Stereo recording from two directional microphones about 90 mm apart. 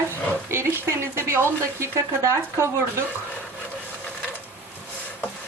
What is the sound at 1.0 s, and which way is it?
Speech, 30° right (ahead or behind).